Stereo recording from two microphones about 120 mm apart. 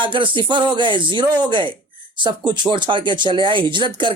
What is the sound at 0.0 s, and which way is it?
Speech, 45° right (ahead or behind).